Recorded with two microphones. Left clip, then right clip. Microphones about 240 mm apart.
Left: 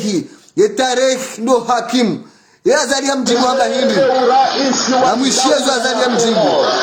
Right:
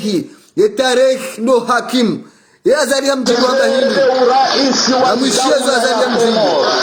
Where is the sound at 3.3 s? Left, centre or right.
Right.